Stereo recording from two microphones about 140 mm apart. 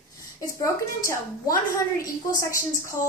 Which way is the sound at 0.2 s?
25° left (ahead or behind).